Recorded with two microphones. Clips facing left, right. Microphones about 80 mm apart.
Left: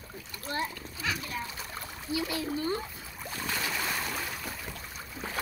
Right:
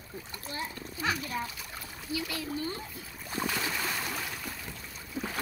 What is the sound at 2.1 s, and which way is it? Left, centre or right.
Speech, left.